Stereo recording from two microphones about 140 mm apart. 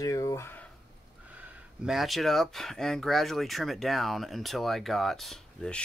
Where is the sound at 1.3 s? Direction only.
5° right (ahead or behind).